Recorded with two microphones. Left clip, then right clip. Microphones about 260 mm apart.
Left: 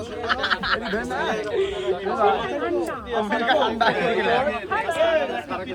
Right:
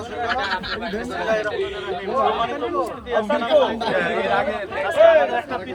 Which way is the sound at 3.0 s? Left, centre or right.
Centre.